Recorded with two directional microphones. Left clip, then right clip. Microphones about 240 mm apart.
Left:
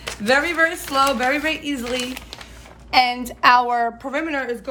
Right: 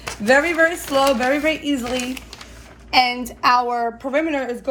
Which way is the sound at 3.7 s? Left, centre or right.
Left.